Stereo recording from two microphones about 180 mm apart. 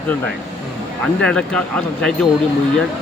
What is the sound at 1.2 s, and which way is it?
Speech, 5° left (ahead or behind).